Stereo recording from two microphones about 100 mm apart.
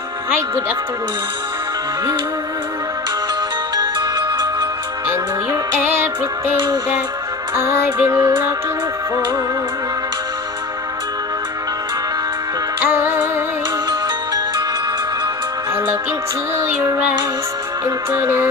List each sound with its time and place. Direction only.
3.7 s music: 45° right (ahead or behind)
5.0 s music: 25° right (ahead or behind)
7.5 s music: 25° right (ahead or behind)
12.8 s music: 20° right (ahead or behind)
16.5 s music: 30° right (ahead or behind)
18.1 s music: 25° right (ahead or behind)